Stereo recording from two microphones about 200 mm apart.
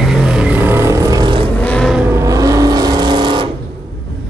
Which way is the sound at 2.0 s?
15° right (ahead or behind).